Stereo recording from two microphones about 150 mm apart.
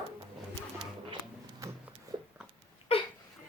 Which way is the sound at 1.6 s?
20° right (ahead or behind).